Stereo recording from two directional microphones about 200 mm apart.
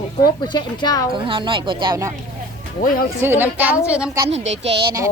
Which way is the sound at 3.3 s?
10° right (ahead or behind).